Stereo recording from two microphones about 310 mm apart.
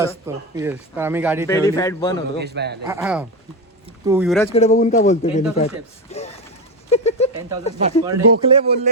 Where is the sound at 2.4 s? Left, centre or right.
Right.